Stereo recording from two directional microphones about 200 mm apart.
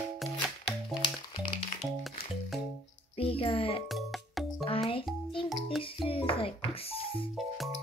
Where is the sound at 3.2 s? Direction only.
30° left (ahead or behind).